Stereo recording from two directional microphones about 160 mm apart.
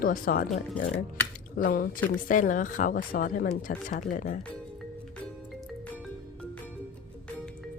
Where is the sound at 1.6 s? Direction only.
65° left (ahead or behind).